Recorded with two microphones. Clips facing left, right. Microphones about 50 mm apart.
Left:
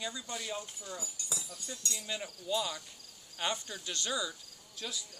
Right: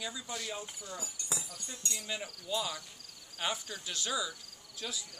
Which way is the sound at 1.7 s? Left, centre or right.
Right.